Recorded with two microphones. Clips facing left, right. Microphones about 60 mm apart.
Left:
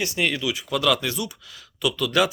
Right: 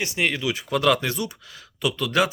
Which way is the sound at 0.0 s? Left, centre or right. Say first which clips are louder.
Even; right.